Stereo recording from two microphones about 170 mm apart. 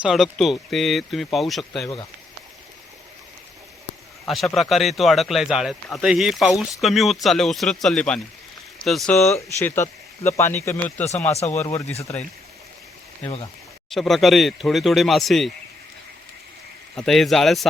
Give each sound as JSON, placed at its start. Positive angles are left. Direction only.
{"t": 0.0, "sound": "speech", "side_deg": 0}
{"t": 4.3, "sound": "speech", "side_deg": 0}
{"t": 9.3, "sound": "speech", "side_deg": 15}
{"t": 11.3, "sound": "speech", "side_deg": 40}
{"t": 11.5, "sound": "speech", "side_deg": 15}
{"t": 11.9, "sound": "speech", "side_deg": 40}
{"t": 13.9, "sound": "speech", "side_deg": 0}
{"t": 16.9, "sound": "speech", "side_deg": 5}